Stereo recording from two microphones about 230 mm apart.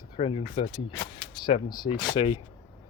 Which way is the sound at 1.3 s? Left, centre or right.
Left.